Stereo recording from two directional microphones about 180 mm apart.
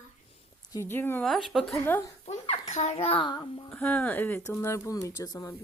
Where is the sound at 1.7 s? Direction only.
15° left (ahead or behind).